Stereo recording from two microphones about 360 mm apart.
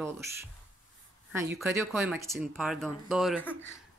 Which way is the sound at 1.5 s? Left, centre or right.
Centre.